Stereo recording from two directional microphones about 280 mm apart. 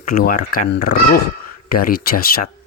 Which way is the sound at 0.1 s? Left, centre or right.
Left.